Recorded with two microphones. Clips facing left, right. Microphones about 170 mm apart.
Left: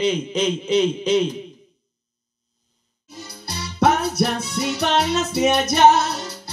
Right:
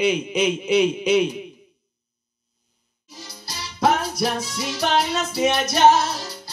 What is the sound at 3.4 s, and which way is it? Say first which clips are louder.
Music: left 2 dB; 65° left (ahead or behind).